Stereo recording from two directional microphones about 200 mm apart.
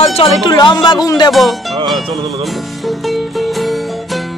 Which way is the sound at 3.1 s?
Centre (ahead or behind).